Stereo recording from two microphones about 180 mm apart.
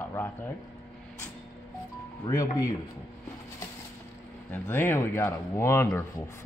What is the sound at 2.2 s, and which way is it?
Speech, 20° left (ahead or behind).